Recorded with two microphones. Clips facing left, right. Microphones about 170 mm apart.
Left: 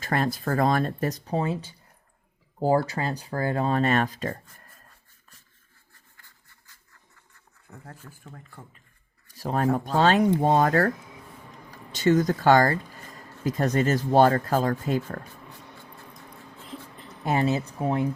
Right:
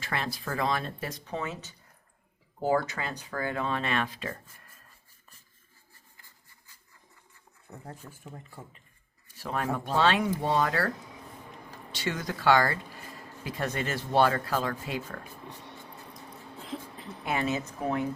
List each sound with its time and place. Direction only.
0.0 s speech: 45° left (ahead or behind)
7.7 s speech: 15° right (ahead or behind)
9.4 s speech: 35° left (ahead or behind)
17.2 s speech: 35° left (ahead or behind)